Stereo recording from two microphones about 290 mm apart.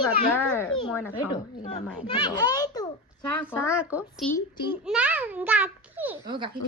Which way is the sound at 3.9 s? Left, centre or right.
Centre.